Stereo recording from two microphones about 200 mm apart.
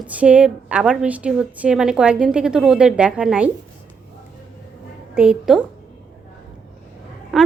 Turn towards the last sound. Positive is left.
turn(degrees=0)  # may be behind; listen again after turning